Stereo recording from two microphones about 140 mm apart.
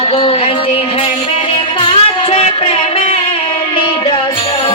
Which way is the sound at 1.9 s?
45° left (ahead or behind).